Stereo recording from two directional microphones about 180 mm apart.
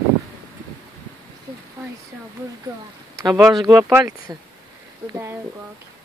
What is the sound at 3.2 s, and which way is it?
Speech, 20° right (ahead or behind).